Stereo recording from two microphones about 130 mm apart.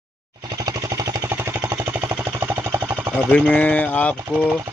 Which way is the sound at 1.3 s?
20° right (ahead or behind).